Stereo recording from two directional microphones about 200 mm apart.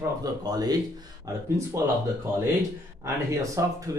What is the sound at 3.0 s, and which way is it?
Speech, 15° right (ahead or behind).